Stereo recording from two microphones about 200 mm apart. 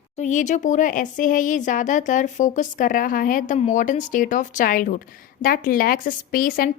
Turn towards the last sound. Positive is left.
turn(degrees=45)  # may be behind; listen again after turning